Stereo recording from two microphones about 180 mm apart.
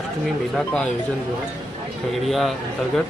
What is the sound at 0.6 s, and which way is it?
Mantra, 5° left (ahead or behind).